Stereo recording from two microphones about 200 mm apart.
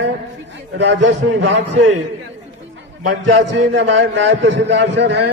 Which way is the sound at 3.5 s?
65° right (ahead or behind).